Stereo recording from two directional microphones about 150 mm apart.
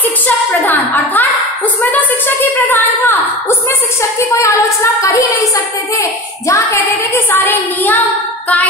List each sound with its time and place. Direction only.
0.6 s a woman's voice: 10° left (ahead or behind)